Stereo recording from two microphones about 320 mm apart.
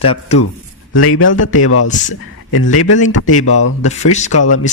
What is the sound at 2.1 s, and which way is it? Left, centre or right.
Speech, left.